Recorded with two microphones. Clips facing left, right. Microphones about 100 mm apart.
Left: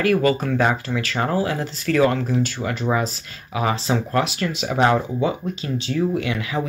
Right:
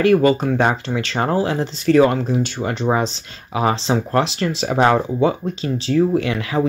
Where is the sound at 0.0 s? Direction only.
25° right (ahead or behind).